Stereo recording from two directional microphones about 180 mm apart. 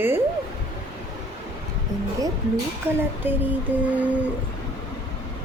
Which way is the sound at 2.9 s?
10° right (ahead or behind).